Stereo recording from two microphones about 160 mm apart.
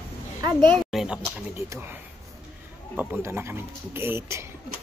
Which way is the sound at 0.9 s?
5° right (ahead or behind).